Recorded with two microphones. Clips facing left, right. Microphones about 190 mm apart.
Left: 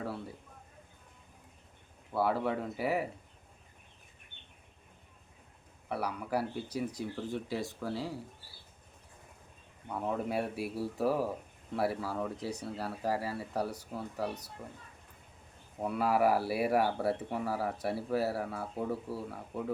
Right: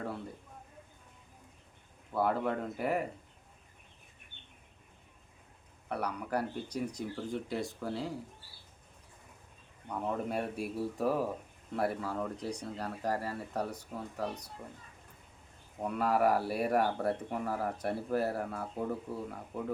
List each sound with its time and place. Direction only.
0.0 s speech: 5° left (ahead or behind)
2.1 s speech: 5° left (ahead or behind)
5.9 s speech: 5° left (ahead or behind)
9.9 s speech: 5° left (ahead or behind)
15.8 s speech: 5° left (ahead or behind)